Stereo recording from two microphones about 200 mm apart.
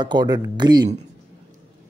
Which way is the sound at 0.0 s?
20° right (ahead or behind).